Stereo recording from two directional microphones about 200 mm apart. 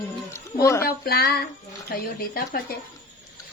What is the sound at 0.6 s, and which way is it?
Speech, 15° left (ahead or behind).